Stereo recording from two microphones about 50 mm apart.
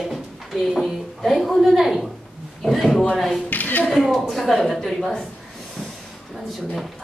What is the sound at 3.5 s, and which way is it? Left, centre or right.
Speech, left.